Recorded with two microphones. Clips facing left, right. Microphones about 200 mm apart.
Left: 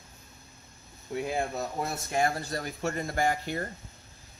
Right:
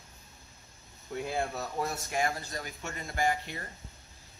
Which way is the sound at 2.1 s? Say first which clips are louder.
Left 8 dB; 35° left (ahead or behind).